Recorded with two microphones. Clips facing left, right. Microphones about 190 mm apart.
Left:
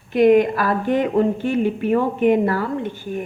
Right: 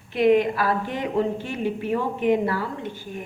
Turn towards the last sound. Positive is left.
turn(degrees=55)  # may be behind; listen again after turning